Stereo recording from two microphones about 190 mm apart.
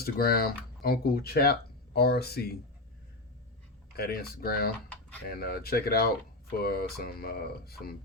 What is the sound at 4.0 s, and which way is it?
Speech, 55° left (ahead or behind).